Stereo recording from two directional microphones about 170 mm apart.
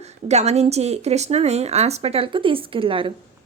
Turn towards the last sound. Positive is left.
turn(degrees=-30)  # may be behind; listen again after turning